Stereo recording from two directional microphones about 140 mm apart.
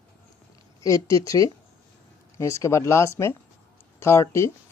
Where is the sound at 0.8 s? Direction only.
25° left (ahead or behind).